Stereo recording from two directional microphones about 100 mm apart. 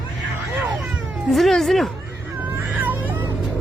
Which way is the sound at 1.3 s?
Centre (ahead or behind).